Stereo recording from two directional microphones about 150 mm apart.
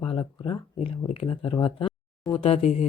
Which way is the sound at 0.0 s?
35° left (ahead or behind).